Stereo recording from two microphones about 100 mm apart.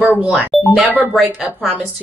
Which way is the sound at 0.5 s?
Centre (ahead or behind).